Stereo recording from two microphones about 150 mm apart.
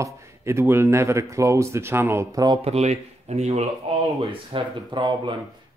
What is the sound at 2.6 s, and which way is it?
Speech, 45° right (ahead or behind).